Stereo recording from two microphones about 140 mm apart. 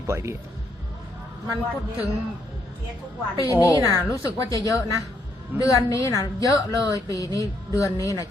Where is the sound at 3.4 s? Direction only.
20° left (ahead or behind).